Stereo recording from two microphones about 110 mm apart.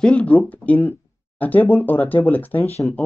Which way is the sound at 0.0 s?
10° left (ahead or behind).